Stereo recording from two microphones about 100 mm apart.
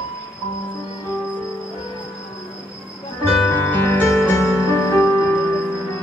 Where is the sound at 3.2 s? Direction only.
20° left (ahead or behind).